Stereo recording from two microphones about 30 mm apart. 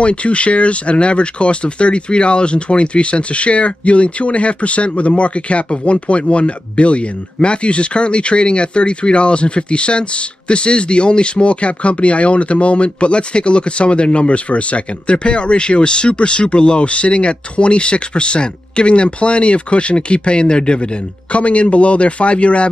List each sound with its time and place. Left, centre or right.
0.0 s speech: left
15.0 s speech: left
21.3 s speech: left